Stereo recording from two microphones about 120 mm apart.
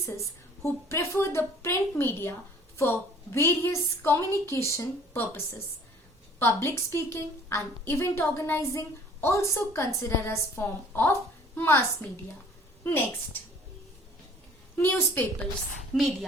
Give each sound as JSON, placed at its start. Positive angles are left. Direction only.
{"t": 0.0, "sound": "a woman's voice", "side_deg": 25}
{"t": 6.4, "sound": "a woman's voice", "side_deg": 20}
{"t": 14.8, "sound": "a woman's voice", "side_deg": 20}
{"t": 15.9, "sound": "a woman's voice", "side_deg": 0}